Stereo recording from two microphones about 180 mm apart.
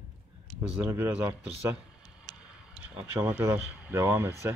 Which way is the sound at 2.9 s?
10° right (ahead or behind).